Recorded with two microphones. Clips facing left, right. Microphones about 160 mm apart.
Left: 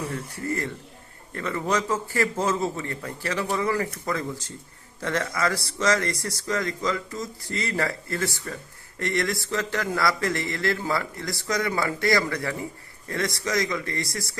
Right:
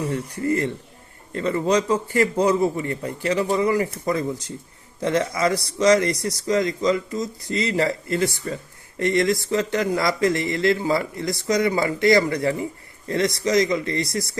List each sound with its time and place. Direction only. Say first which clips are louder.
0.1 s speech: right 7 dB; 20° right (ahead or behind)